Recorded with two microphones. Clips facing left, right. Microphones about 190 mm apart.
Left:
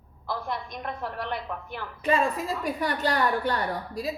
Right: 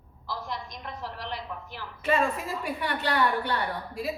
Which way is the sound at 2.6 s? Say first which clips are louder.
Left 5 dB; 40° left (ahead or behind).